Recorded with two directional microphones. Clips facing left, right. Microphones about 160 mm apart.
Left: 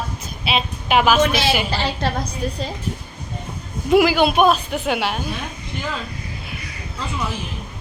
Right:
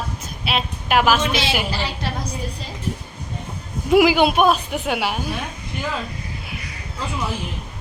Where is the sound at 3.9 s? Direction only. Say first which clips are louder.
Even; 15° right (ahead or behind).